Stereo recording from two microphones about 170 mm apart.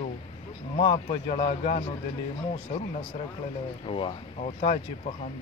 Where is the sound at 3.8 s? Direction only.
30° left (ahead or behind).